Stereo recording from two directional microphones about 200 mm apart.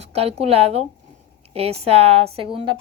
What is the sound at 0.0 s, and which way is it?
A woman's voice, 30° right (ahead or behind).